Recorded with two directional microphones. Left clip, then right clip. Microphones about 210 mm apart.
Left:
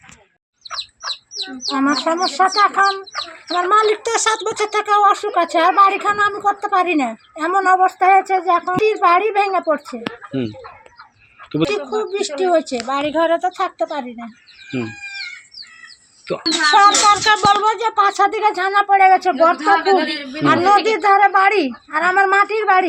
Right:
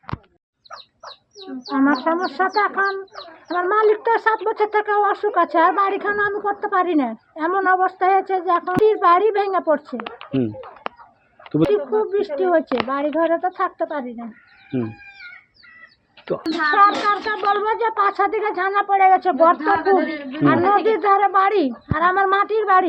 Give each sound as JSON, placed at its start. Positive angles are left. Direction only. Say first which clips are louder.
{"t": 1.6, "sound": "speech", "louder": "left 1 dB", "side_deg": 0}
{"t": 11.5, "sound": "speech", "louder": "right 1 dB", "side_deg": 0}
{"t": 16.4, "sound": "speech", "louder": "left 4 dB", "side_deg": 0}
{"t": 19.5, "sound": "a man's voice", "louder": "left 3 dB", "side_deg": 35}
{"t": 20.2, "sound": "speech", "louder": "left 3 dB", "side_deg": 5}